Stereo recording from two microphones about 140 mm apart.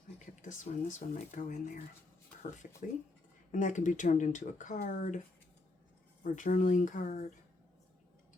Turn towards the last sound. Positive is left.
turn(degrees=65)  # may be behind; listen again after turning